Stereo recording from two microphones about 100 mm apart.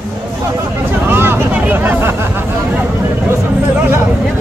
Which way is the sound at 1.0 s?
20° right (ahead or behind).